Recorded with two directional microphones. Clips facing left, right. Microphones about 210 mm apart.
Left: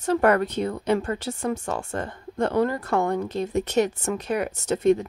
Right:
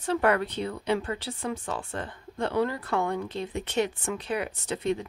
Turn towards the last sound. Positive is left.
turn(degrees=45)  # may be behind; listen again after turning